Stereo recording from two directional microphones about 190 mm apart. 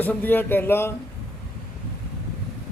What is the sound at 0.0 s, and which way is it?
Speech, 10° left (ahead or behind).